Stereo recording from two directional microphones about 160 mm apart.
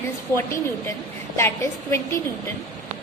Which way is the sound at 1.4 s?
15° left (ahead or behind).